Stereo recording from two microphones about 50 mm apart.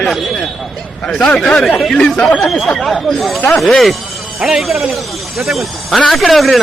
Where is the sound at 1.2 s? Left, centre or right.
Centre.